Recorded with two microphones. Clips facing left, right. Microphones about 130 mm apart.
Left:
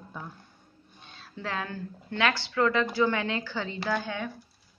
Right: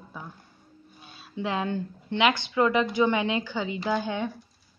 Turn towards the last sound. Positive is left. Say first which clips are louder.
# right 3 dB
turn(degrees=-20)  # may be behind; listen again after turning